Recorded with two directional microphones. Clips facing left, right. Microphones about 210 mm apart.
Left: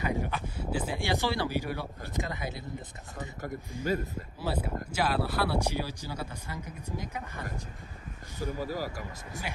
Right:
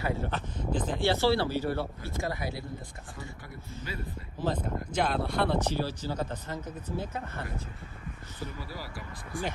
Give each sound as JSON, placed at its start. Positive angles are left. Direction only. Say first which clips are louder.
{"t": 0.0, "sound": "speech", "louder": "even", "side_deg": 15}
{"t": 3.8, "sound": "speech", "louder": "left 9 dB", "side_deg": 15}
{"t": 8.4, "sound": "speech", "louder": "left 8 dB", "side_deg": 45}